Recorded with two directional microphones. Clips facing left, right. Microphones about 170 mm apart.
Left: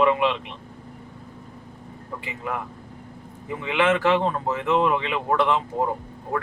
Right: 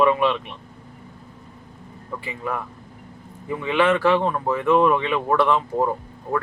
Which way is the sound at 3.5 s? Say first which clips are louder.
Right 2 dB; 20° left (ahead or behind).